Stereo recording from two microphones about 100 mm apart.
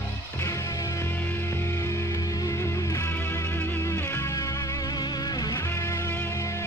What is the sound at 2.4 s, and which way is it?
Music, 35° left (ahead or behind).